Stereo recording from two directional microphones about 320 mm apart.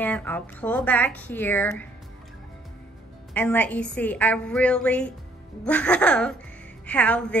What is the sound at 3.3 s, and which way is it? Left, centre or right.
A woman's voice, centre.